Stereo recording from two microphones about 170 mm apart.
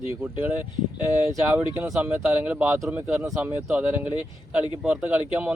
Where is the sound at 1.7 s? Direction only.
15° right (ahead or behind).